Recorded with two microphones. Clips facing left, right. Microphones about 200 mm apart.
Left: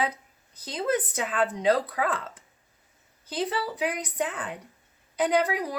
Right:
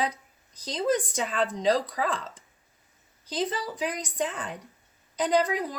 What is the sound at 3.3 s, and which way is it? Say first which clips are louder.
A woman's voice: left 1 dB; 10° left (ahead or behind).